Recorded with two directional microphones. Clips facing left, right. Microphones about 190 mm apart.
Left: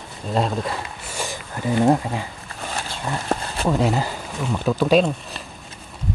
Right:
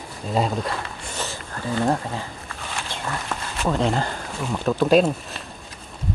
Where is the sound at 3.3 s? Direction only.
35° left (ahead or behind).